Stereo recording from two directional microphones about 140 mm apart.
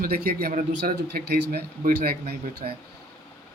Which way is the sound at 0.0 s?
90° right.